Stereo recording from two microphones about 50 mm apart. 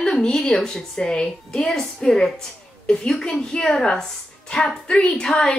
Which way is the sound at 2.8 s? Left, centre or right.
Left.